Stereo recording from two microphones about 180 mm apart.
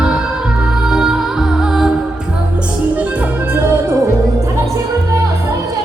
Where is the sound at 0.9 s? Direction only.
5° right (ahead or behind).